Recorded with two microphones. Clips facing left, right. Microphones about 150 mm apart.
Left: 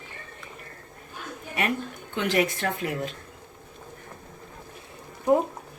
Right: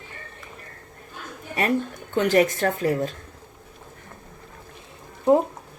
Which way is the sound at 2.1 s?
40° right (ahead or behind).